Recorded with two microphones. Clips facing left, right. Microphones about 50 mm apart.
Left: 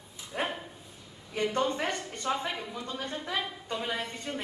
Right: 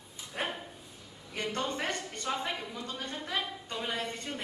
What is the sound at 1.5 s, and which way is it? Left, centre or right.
Speech, centre.